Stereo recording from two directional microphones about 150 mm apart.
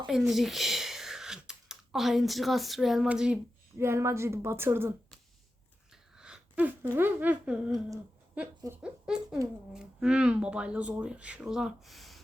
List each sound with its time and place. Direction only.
0.1 s speech: centre (ahead or behind)
6.1 s a sound: 5° right (ahead or behind)
6.9 s speech: 10° right (ahead or behind)